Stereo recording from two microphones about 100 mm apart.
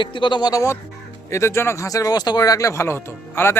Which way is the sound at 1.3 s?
25° left (ahead or behind).